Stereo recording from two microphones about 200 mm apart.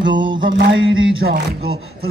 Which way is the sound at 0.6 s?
70° right (ahead or behind).